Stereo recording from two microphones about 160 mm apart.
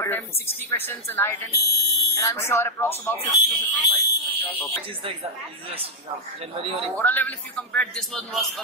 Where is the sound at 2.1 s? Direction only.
15° left (ahead or behind).